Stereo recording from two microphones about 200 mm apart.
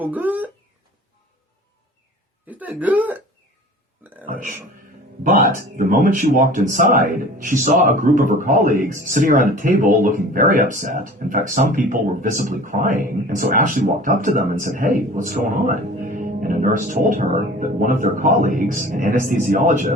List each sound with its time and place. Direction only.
0.0 s speech: 10° right (ahead or behind)
2.5 s speech: 10° right (ahead or behind)
4.3 s music: 40° right (ahead or behind)
5.2 s speech: 40° right (ahead or behind)